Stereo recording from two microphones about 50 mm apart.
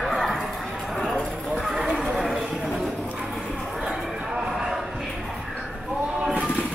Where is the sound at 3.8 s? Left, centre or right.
Centre.